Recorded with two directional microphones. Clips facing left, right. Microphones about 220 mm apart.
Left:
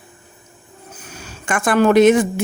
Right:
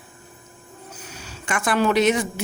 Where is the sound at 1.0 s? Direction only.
50° left (ahead or behind).